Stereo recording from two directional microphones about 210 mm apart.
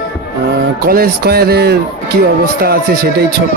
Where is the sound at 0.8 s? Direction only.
45° right (ahead or behind).